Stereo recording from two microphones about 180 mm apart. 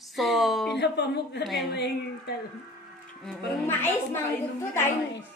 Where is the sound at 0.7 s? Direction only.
70° left (ahead or behind).